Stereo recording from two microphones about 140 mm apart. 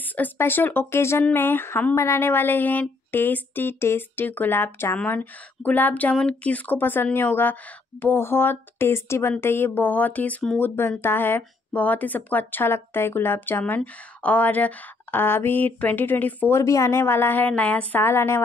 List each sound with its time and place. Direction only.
0.0 s speech: 10° left (ahead or behind)